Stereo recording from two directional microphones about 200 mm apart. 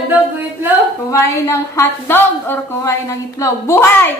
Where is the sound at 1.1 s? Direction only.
15° left (ahead or behind).